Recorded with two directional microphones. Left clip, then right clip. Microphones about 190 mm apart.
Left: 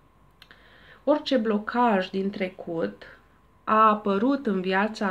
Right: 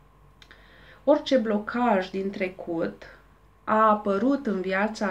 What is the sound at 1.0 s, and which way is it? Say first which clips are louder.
Speech: right 2 dB; 45° left (ahead or behind).